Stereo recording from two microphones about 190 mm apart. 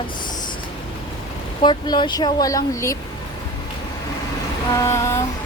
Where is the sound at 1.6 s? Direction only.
25° left (ahead or behind).